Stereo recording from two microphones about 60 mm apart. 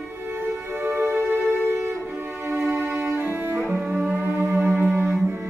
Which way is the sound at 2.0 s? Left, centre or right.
Right.